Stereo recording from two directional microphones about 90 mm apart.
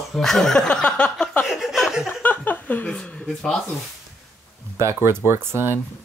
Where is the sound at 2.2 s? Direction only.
20° left (ahead or behind).